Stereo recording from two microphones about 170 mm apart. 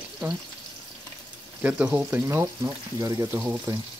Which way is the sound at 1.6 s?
10° right (ahead or behind).